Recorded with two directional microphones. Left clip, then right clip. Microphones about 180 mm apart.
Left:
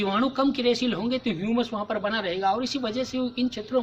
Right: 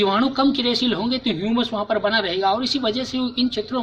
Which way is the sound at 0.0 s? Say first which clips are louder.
Right 6 dB; 20° left (ahead or behind).